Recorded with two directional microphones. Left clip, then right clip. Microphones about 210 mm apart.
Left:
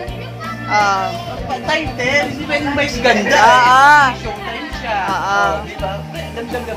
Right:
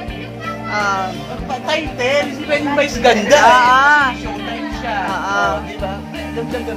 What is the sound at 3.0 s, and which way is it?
Speech, 30° right (ahead or behind).